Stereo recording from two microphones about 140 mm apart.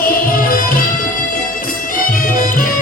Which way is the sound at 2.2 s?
75° left (ahead or behind).